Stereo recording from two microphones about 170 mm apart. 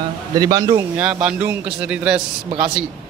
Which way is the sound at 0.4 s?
20° right (ahead or behind).